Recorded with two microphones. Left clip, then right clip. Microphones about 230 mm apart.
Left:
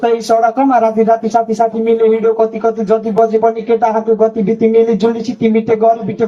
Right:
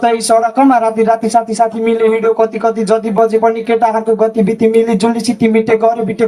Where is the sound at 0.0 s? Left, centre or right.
Right.